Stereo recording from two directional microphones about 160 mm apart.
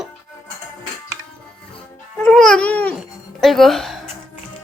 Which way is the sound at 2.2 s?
5° left (ahead or behind).